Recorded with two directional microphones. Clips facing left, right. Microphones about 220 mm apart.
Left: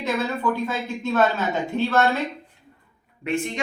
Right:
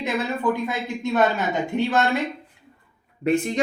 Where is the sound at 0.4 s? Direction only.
15° right (ahead or behind).